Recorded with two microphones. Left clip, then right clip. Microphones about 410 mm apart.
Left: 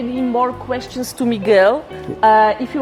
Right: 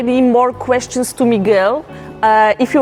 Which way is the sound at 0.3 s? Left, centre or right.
Right.